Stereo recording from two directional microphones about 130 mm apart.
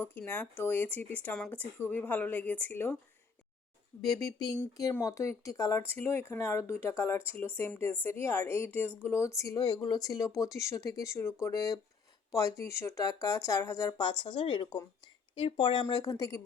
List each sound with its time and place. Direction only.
0.0 s speech: 15° left (ahead or behind)
4.0 s speech: 25° left (ahead or behind)